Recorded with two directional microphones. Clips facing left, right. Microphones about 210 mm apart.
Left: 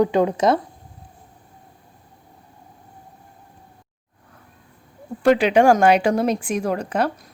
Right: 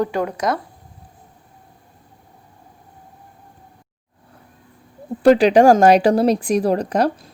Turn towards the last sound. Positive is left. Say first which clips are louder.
# right 4 dB
turn(degrees=-35)  # may be behind; listen again after turning